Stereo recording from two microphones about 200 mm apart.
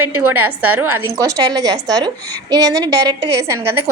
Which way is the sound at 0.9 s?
15° right (ahead or behind).